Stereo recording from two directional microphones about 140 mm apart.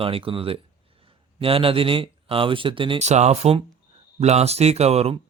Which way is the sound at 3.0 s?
55° right (ahead or behind).